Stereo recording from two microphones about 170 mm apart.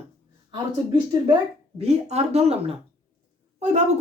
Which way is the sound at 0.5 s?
25° right (ahead or behind).